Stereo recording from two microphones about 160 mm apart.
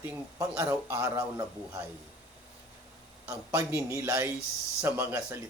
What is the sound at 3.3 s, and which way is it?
Speech, 15° right (ahead or behind).